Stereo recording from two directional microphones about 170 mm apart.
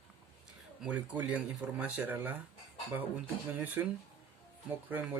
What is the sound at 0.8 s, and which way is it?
Speech, 10° right (ahead or behind).